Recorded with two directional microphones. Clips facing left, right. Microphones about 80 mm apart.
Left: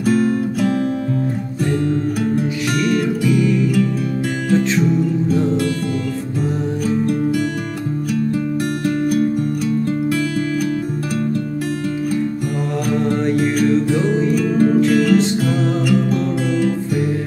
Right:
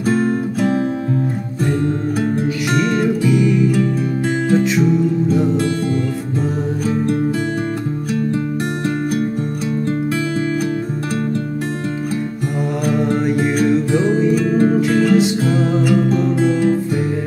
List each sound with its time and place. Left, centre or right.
0.1 s music: right
2.7 s music: right
3.3 s music: centre
12.9 s music: centre
14.9 s music: right